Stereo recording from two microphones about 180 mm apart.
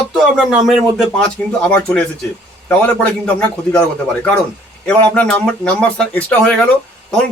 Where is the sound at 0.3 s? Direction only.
Centre (ahead or behind).